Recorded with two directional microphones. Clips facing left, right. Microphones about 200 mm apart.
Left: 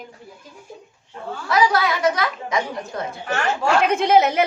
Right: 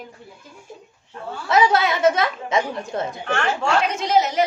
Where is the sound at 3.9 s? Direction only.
55° left (ahead or behind).